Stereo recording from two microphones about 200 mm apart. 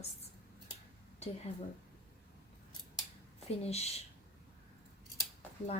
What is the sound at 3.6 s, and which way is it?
Speech, 30° left (ahead or behind).